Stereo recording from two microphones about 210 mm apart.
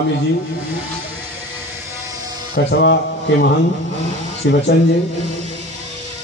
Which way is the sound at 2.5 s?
55° left (ahead or behind).